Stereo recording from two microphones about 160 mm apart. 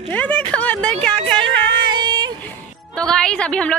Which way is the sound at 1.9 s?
25° right (ahead or behind).